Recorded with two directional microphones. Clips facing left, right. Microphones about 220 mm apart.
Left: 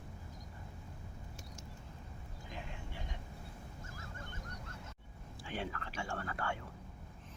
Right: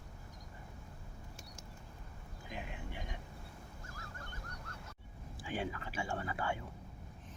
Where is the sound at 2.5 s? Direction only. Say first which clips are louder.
Right 3 dB; 15° right (ahead or behind).